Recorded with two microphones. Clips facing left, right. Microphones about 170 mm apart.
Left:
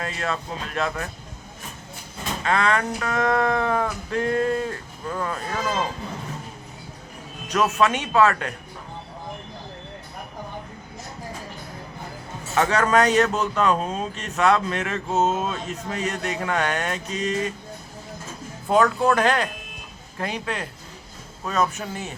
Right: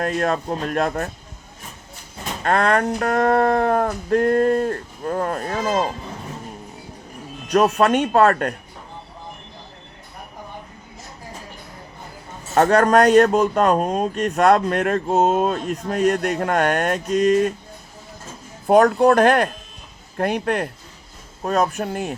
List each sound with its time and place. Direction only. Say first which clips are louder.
0.0 s speech: right 7 dB; 55° right (ahead or behind)
2.4 s speech: right 4 dB; 50° right (ahead or behind)
7.5 s speech: right 6 dB; 35° right (ahead or behind)
7.8 s speech: right 4 dB; 55° right (ahead or behind)
12.5 s speech: right 5 dB; 50° right (ahead or behind)
18.7 s speech: right 6 dB; 55° right (ahead or behind)
21.7 s speech: right 7 dB; 60° right (ahead or behind)